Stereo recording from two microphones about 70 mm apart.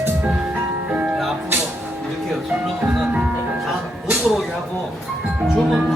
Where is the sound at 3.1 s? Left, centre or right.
Right.